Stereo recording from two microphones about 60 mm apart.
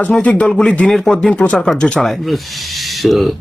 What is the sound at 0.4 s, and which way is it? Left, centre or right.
Speech, centre.